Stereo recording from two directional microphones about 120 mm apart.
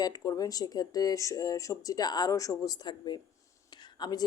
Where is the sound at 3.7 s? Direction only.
40° left (ahead or behind).